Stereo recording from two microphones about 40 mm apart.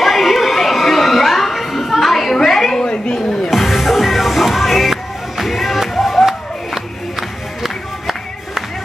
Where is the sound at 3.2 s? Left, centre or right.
Centre.